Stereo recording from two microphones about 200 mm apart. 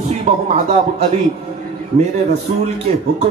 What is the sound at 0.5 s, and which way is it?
Speech, 30° right (ahead or behind).